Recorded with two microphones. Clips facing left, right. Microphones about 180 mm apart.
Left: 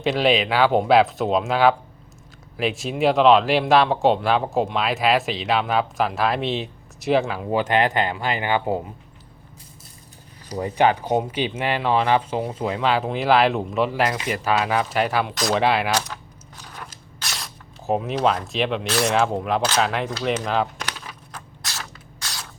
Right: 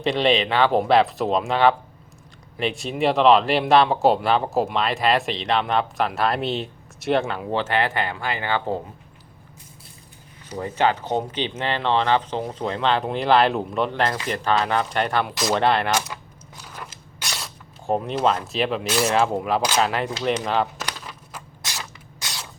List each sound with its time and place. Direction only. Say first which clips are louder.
0.0 s speech: even; centre (ahead or behind)
7.6 s speech: left 4 dB; 15° left (ahead or behind)
10.6 s speech: left 2 dB; 15° left (ahead or behind)
16.6 s a sound: right 1 dB; 5° right (ahead or behind)
18.9 s speech: even; centre (ahead or behind)
21.0 s a sound: even; centre (ahead or behind)
21.7 s spray: even; 15° right (ahead or behind)